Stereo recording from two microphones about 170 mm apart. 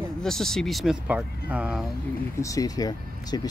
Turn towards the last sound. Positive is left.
turn(degrees=25)  # may be behind; listen again after turning